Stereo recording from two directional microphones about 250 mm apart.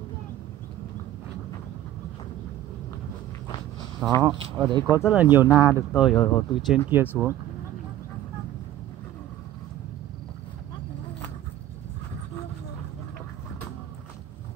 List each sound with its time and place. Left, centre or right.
4.1 s speech: centre